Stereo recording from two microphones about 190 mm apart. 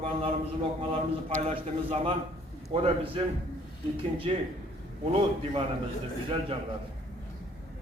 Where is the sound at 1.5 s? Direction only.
30° right (ahead or behind).